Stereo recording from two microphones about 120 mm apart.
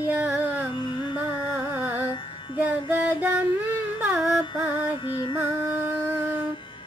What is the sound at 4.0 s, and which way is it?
Music, 10° right (ahead or behind).